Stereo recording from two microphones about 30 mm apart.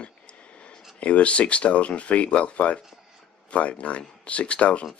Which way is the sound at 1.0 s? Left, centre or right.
Left.